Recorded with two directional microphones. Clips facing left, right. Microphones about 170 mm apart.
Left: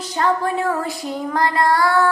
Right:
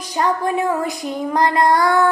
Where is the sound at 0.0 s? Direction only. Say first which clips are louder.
Even; 15° right (ahead or behind).